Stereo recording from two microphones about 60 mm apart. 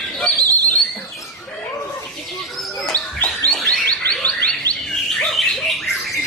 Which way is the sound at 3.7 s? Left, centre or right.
Left.